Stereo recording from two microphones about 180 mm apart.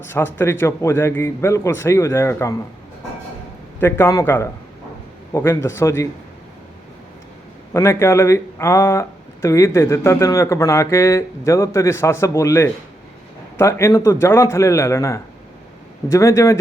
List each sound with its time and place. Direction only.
0.0 s speech: 10° left (ahead or behind)
3.8 s speech: 15° left (ahead or behind)
7.7 s speech: 15° left (ahead or behind)